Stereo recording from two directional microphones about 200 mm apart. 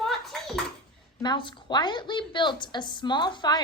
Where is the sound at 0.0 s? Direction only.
Centre (ahead or behind).